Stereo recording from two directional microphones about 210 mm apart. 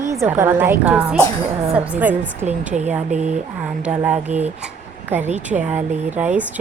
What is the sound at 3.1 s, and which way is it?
Speech, 35° right (ahead or behind).